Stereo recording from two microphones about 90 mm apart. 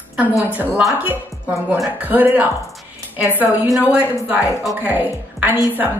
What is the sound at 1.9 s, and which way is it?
A woman's voice, 20° right (ahead or behind).